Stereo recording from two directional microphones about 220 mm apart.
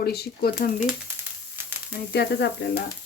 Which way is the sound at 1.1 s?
10° right (ahead or behind).